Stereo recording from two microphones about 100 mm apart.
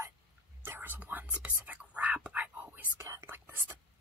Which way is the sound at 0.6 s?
20° right (ahead or behind).